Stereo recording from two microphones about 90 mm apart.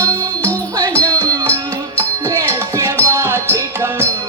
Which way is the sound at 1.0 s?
40° right (ahead or behind).